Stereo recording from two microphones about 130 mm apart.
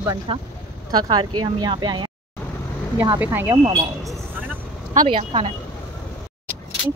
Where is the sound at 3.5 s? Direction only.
30° right (ahead or behind).